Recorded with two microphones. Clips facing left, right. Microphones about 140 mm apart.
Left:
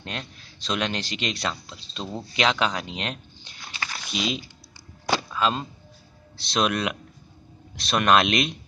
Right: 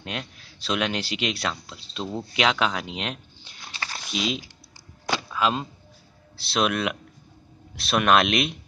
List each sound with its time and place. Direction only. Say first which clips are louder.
0.0 s speech: right 1 dB; 5° right (ahead or behind)
3.7 s a sound: left 1 dB; 30° right (ahead or behind)
4.1 s speech: right 1 dB; centre (ahead or behind)